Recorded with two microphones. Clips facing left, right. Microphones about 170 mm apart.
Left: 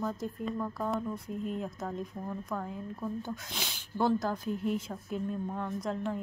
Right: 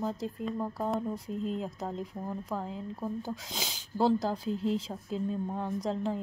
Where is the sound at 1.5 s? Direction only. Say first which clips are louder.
Right 1 dB; 25° right (ahead or behind).